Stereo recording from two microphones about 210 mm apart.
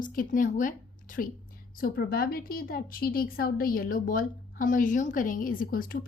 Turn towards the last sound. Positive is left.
turn(degrees=45)  # may be behind; listen again after turning